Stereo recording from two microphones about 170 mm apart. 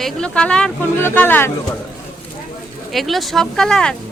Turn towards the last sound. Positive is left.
turn(degrees=5)  # may be behind; listen again after turning